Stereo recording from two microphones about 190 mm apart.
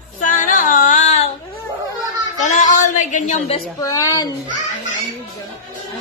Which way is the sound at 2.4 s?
40° left (ahead or behind).